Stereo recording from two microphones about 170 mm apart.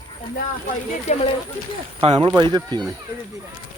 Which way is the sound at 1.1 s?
40° left (ahead or behind).